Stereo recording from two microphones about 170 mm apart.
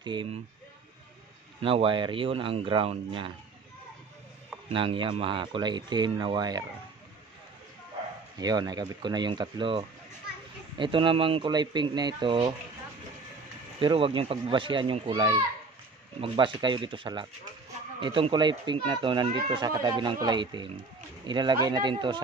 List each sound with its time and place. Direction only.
0.0 s speech: 30° right (ahead or behind)
1.6 s speech: 30° right (ahead or behind)
4.6 s speech: 30° right (ahead or behind)
8.4 s speech: 25° right (ahead or behind)
13.7 s speech: 30° right (ahead or behind)